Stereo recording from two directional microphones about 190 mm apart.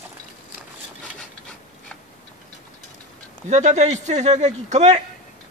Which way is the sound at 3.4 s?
35° right (ahead or behind).